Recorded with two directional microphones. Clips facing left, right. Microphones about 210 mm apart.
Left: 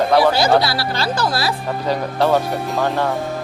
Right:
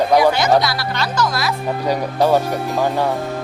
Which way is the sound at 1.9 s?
15° right (ahead or behind).